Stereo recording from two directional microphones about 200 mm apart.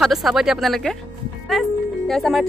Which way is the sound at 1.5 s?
Centre (ahead or behind).